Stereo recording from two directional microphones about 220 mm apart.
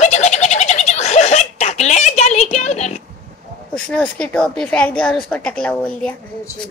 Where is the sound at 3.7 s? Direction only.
5° left (ahead or behind).